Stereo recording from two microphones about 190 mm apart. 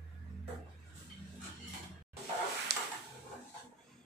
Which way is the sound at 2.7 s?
60° right (ahead or behind).